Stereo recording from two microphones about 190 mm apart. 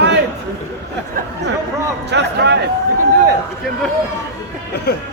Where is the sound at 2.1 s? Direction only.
65° right (ahead or behind).